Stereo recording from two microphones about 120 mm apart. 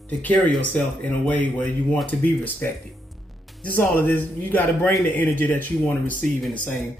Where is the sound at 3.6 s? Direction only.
15° left (ahead or behind).